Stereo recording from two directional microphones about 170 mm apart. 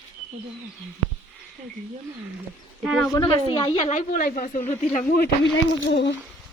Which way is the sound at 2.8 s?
Centre (ahead or behind).